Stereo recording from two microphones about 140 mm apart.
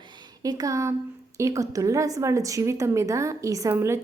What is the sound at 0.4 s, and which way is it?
A woman's voice, 25° right (ahead or behind).